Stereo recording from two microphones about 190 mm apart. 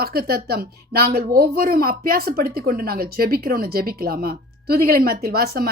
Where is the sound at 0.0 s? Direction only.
55° right (ahead or behind).